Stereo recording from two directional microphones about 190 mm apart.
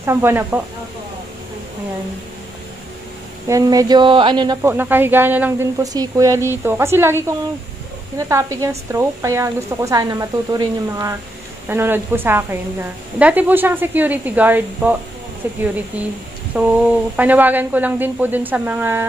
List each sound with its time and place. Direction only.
0.0 s speech: 15° right (ahead or behind)
3.4 s speech: 20° right (ahead or behind)
8.2 s speech: 15° right (ahead or behind)